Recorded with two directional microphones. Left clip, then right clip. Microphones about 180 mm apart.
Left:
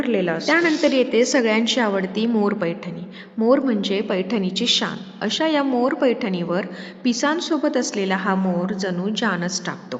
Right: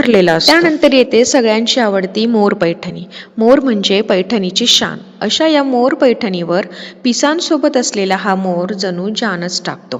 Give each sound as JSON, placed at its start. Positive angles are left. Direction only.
{"t": 0.0, "sound": "a woman's voice", "side_deg": -40}